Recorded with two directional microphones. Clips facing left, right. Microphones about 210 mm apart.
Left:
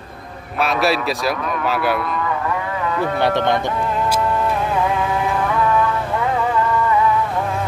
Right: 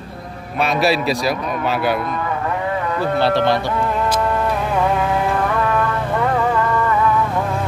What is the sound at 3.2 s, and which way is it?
Speech, 20° left (ahead or behind).